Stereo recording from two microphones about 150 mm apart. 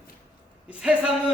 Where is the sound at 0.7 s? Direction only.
5° right (ahead or behind).